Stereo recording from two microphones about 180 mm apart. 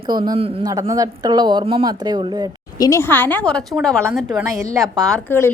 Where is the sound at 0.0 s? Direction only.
25° right (ahead or behind).